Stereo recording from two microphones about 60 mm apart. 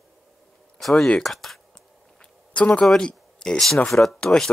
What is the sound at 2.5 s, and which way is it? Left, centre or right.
Speech, left.